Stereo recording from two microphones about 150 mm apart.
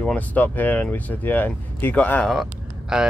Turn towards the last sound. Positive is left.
turn(degrees=-5)  # may be behind; listen again after turning